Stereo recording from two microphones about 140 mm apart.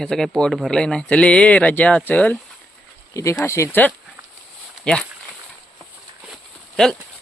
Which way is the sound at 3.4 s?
20° left (ahead or behind).